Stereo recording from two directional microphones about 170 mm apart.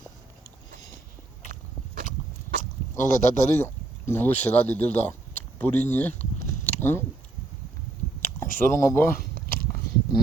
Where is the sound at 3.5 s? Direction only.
15° left (ahead or behind).